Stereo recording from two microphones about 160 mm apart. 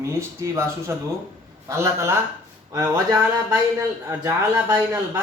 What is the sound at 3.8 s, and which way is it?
A man's voice, 20° right (ahead or behind).